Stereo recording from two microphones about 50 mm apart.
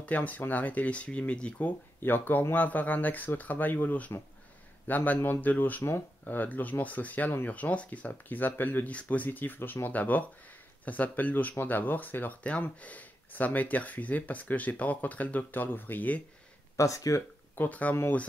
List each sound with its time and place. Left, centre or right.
0.0 s speech: left
2.0 s speech: left
16.7 s speech: left
17.6 s speech: left